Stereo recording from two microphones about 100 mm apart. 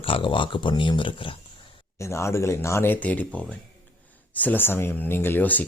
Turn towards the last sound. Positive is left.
turn(degrees=15)  # may be behind; listen again after turning